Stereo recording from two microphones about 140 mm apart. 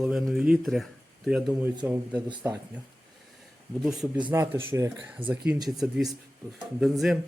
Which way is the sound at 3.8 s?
5° right (ahead or behind).